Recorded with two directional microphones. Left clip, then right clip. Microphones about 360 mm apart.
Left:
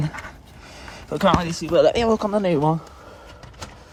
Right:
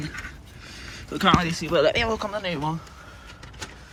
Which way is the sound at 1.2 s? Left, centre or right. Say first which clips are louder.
Left 1 dB; centre.